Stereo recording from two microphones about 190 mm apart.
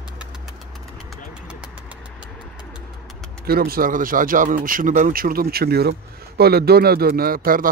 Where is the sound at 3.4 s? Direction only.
50° right (ahead or behind).